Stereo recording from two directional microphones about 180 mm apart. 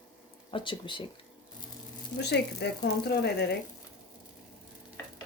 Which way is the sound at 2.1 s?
70° left (ahead or behind).